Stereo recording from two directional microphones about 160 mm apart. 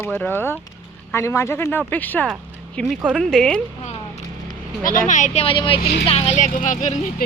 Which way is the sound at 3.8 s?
45° left (ahead or behind).